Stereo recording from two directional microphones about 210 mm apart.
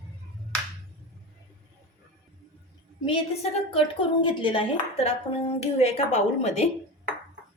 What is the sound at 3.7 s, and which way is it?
Speech, 25° left (ahead or behind).